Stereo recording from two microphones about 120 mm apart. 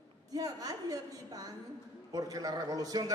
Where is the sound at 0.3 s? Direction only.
30° right (ahead or behind).